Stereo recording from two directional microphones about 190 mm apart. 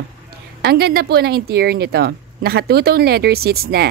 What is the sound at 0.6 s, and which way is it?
Speech, 55° right (ahead or behind).